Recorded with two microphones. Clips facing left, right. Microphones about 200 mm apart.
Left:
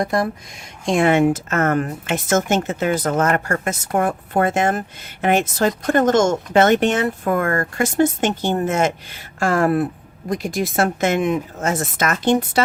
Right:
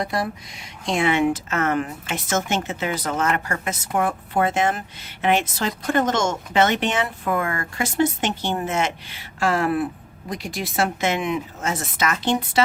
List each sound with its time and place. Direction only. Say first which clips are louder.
0.0 s speech: left 5 dB; 45° left (ahead or behind)